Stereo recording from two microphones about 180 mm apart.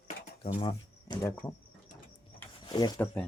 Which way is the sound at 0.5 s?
30° left (ahead or behind).